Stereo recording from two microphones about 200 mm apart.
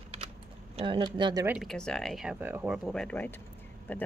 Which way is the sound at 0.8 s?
25° right (ahead or behind).